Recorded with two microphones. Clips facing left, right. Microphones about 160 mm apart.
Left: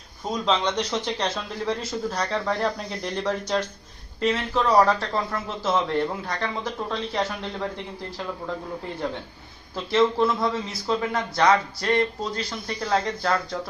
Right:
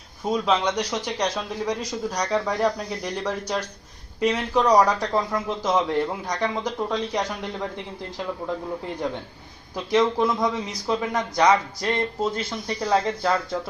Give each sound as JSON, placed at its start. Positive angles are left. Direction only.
{"t": 0.3, "sound": "a man's voice", "side_deg": -10}
{"t": 9.7, "sound": "a man's voice", "side_deg": -15}